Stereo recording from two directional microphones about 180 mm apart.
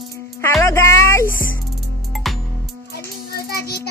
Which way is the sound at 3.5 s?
60° left (ahead or behind).